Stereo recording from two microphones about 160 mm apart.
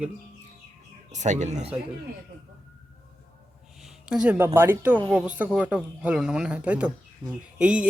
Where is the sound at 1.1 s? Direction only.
50° right (ahead or behind).